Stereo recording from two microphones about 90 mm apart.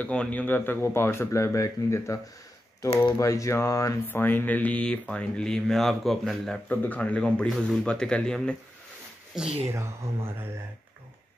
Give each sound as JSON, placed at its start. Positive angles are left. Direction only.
{"t": 0.0, "sound": "speech", "side_deg": 15}
{"t": 3.2, "sound": "speech", "side_deg": 35}
{"t": 4.1, "sound": "speech", "side_deg": 20}
{"t": 6.7, "sound": "speech", "side_deg": 20}
{"t": 9.3, "sound": "speech", "side_deg": -10}
{"t": 9.6, "sound": "speech", "side_deg": -30}